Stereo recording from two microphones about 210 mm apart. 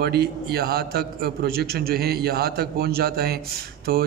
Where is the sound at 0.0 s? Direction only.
50° right (ahead or behind).